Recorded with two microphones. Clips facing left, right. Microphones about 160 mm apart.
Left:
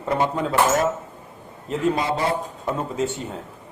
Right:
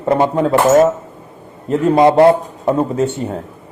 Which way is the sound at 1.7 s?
60° right (ahead or behind).